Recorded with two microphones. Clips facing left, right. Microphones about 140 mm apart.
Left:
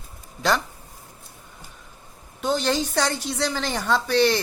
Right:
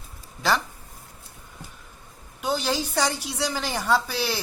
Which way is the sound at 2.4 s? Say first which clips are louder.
Left 3 dB; 10° right (ahead or behind).